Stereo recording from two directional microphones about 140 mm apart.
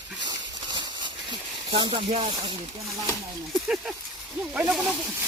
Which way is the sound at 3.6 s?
5° right (ahead or behind).